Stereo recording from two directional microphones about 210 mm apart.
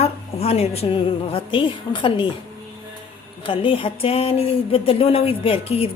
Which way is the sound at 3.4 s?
25° left (ahead or behind).